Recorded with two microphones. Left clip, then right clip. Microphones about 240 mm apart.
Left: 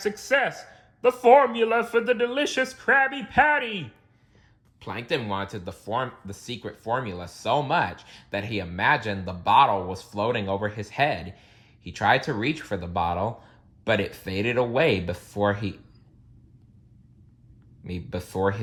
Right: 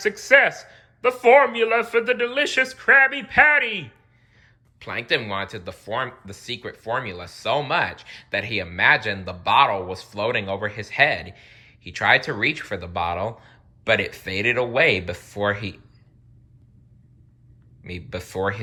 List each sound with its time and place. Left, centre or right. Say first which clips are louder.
0.0 s speech: right 7 dB; centre
17.8 s speech: right 2 dB; centre